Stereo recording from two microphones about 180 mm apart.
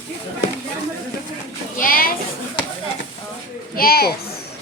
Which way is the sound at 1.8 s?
55° left (ahead or behind).